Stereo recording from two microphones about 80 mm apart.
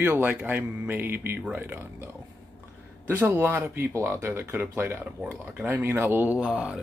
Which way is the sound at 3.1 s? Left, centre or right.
Right.